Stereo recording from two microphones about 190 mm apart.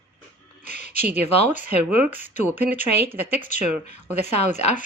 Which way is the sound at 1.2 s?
35° left (ahead or behind).